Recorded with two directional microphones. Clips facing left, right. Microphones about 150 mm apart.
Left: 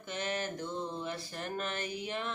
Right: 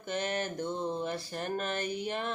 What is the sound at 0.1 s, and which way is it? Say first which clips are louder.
Mantra: right 3 dB; 45° right (ahead or behind).